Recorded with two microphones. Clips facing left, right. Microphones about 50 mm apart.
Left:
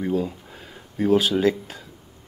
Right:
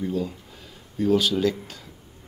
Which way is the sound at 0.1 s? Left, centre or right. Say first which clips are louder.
Left 3 dB; left.